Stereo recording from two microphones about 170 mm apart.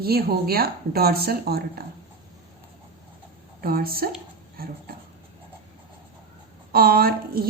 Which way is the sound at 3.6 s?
60° right (ahead or behind).